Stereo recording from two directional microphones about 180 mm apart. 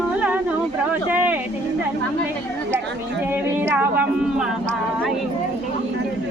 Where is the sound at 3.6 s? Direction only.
10° right (ahead or behind).